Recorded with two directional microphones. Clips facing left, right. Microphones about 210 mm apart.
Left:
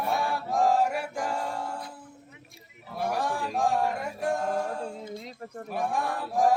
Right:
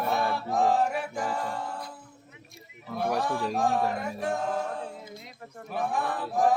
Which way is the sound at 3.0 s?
10° left (ahead or behind).